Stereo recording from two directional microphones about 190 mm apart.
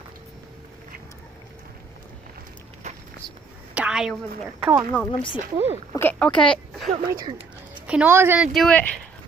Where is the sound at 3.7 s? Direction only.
5° right (ahead or behind).